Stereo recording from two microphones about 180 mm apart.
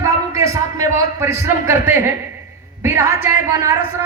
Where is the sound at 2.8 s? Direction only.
15° right (ahead or behind).